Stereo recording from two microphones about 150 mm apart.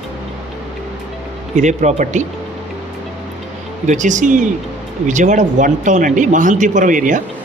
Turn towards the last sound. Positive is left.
turn(degrees=-60)  # may be behind; listen again after turning